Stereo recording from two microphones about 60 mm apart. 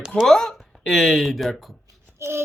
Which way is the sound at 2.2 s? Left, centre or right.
Right.